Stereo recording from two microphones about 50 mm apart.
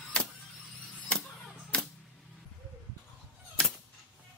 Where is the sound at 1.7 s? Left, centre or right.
Centre.